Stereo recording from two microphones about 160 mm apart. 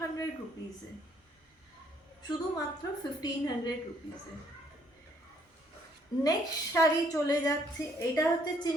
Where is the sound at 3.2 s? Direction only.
25° left (ahead or behind).